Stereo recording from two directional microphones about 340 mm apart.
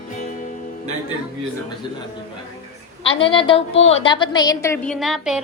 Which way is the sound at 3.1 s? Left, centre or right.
Centre.